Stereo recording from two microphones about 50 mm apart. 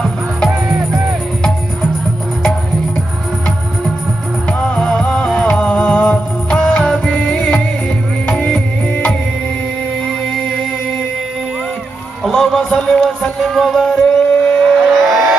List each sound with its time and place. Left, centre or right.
4.5 s music: centre
10.0 s music: centre
12.3 s a sound: centre
12.6 s music: centre
13.5 s vehicle: centre